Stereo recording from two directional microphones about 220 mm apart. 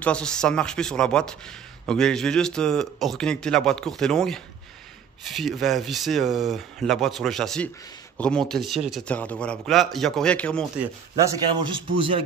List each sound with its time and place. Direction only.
0.0 s speech: 5° left (ahead or behind)
10.8 s a man's voice: 15° right (ahead or behind)